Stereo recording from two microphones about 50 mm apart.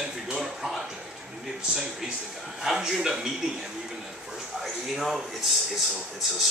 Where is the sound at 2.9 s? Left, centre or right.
Centre.